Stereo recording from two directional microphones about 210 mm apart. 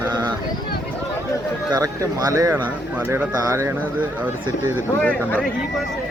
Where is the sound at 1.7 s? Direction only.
15° right (ahead or behind).